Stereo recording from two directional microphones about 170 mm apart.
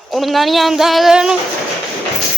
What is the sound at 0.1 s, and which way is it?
Speech, centre (ahead or behind).